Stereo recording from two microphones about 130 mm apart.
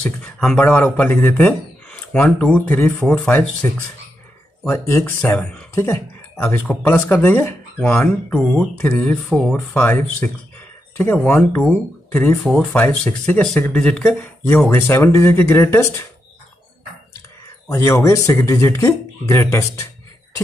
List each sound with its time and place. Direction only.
0.2 s speech: 5° left (ahead or behind)
9.3 s speech: 5° left (ahead or behind)
17.6 s speech: 25° left (ahead or behind)